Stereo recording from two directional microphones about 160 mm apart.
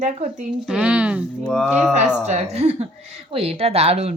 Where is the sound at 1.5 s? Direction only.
5° left (ahead or behind).